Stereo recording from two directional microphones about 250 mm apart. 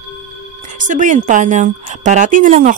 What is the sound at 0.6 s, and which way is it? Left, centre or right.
A woman's voice, right.